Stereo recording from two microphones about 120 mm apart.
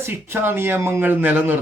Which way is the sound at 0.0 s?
20° right (ahead or behind).